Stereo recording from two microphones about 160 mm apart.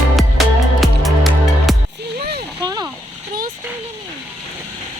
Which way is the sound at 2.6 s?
25° right (ahead or behind).